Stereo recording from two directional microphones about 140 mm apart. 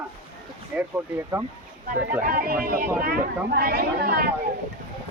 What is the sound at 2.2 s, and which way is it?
Speech, 90° right.